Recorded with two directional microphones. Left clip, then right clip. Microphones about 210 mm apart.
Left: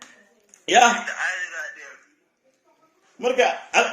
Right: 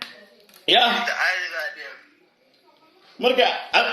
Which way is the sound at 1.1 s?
10° right (ahead or behind).